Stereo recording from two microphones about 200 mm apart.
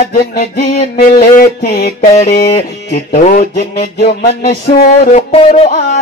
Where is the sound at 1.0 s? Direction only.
45° left (ahead or behind).